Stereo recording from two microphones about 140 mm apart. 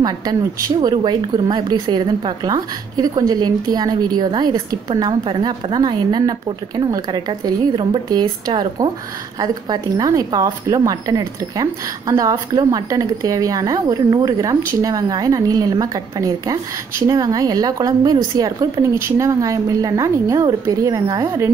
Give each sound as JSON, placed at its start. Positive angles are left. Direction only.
{"t": 0.0, "sound": "a woman's voice", "side_deg": -30}